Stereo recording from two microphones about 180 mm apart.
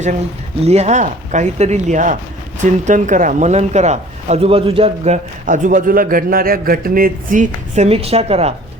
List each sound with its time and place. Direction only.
0.6 s speech: 35° right (ahead or behind)
7.9 s speech: 35° right (ahead or behind)